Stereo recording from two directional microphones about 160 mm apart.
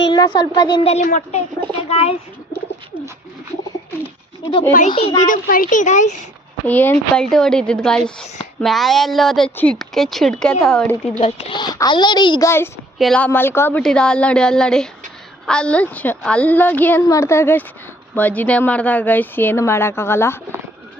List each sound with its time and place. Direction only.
0.0 s speech: 25° left (ahead or behind)
0.9 s a child's voice: 50° left (ahead or behind)
1.9 s speech: 35° left (ahead or behind)
4.9 s a child's voice: 35° left (ahead or behind)
5.2 s a child's voice: 60° left (ahead or behind)
6.7 s a woman's voice: 10° left (ahead or behind)
11.2 s a child's voice: 30° left (ahead or behind)
12.5 s a woman's voice: 15° left (ahead or behind)